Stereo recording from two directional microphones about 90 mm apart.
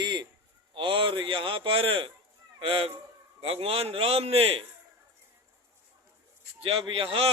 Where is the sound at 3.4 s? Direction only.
90° right.